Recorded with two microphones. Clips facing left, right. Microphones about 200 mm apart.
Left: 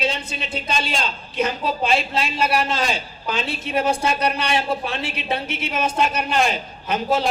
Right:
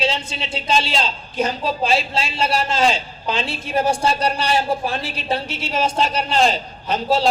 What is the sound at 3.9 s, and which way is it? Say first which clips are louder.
A man's voice: right 1 dB; 55° left (ahead or behind).